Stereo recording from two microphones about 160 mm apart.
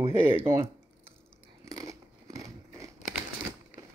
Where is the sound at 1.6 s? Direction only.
20° right (ahead or behind).